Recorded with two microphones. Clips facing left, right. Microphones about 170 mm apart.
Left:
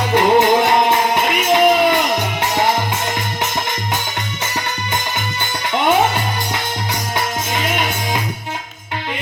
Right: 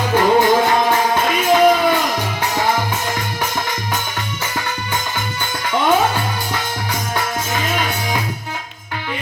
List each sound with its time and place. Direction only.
0.2 s music: 20° left (ahead or behind)